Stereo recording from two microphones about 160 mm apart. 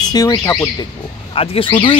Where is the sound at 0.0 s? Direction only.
25° left (ahead or behind).